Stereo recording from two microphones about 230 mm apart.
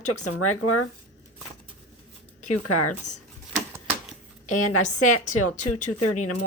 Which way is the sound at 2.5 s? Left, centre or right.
Left.